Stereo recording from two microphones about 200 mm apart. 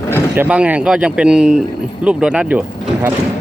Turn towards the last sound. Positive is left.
turn(degrees=-5)  # may be behind; listen again after turning